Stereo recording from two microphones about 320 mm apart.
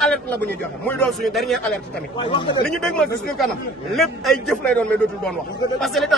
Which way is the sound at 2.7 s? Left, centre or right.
Centre.